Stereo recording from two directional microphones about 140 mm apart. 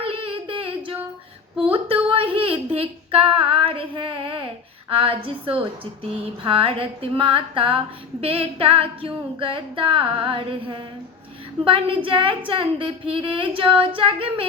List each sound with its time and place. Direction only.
0.0 s child singing: 40° right (ahead or behind)
1.7 s female singing: 40° right (ahead or behind)
4.9 s speech: 40° right (ahead or behind)